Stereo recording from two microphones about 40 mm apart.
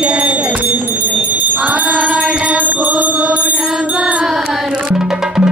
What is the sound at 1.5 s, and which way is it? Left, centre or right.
Jingle bell, right.